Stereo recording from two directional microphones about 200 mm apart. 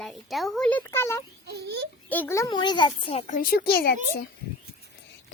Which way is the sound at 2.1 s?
10° left (ahead or behind).